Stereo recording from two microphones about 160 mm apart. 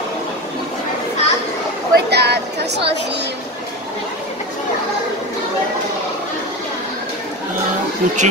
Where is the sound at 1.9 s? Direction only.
90° right.